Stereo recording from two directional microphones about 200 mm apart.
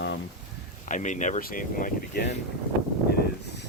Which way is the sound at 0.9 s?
40° left (ahead or behind).